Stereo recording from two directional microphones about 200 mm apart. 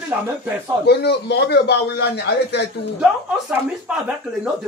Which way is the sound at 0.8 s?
55° left (ahead or behind).